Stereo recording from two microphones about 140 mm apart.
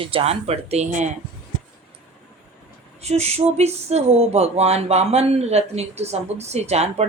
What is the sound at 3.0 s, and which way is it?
Speech, 50° right (ahead or behind).